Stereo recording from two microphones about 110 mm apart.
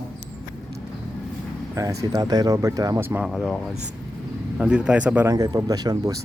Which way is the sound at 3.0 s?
20° right (ahead or behind).